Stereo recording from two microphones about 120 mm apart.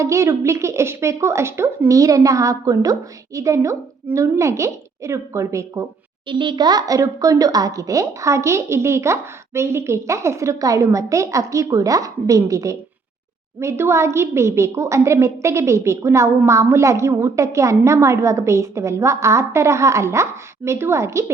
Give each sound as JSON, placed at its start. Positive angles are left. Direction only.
{"t": 0.0, "sound": "speech", "side_deg": -25}
{"t": 6.2, "sound": "speech", "side_deg": -40}